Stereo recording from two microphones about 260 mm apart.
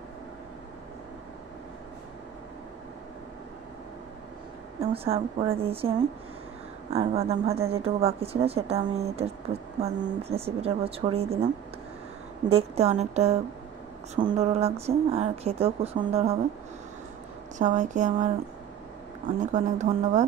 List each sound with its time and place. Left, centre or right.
4.7 s speech: right
12.4 s speech: right
17.6 s speech: right
19.4 s speech: right